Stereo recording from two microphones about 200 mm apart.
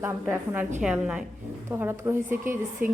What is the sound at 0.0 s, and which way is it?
A woman's voice, 10° right (ahead or behind).